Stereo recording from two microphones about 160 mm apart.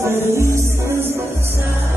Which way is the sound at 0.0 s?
15° right (ahead or behind).